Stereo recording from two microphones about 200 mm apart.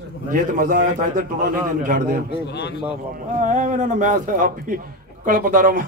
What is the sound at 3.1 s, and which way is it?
A man's voice, 40° right (ahead or behind).